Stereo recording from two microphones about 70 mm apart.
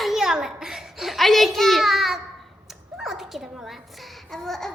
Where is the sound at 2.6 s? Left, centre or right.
Centre.